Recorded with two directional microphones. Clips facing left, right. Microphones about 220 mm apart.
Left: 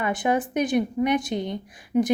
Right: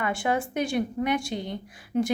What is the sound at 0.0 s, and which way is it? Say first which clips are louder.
A woman's voice: left 3 dB; 20° left (ahead or behind).